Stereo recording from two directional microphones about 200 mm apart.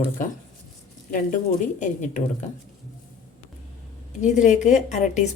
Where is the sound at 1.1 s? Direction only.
40° left (ahead or behind).